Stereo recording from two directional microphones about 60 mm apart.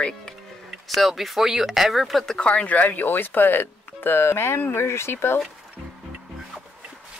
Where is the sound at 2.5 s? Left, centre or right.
Left.